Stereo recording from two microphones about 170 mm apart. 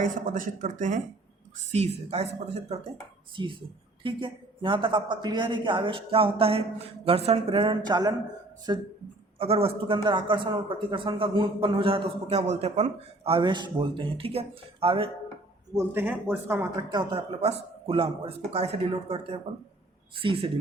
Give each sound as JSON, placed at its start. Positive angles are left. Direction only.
{"t": 0.0, "sound": "speech", "side_deg": -50}
{"t": 9.4, "sound": "speech", "side_deg": -35}
{"t": 15.7, "sound": "speech", "side_deg": -15}
{"t": 16.9, "sound": "speech", "side_deg": -30}